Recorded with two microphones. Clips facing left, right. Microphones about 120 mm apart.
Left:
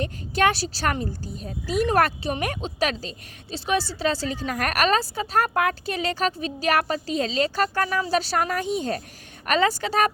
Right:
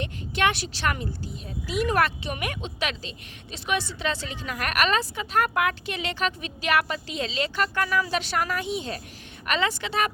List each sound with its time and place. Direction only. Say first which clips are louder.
0.0 s speech: left 3 dB; 40° left (ahead or behind)